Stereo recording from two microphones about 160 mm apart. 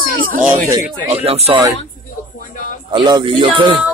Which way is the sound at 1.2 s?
40° right (ahead or behind).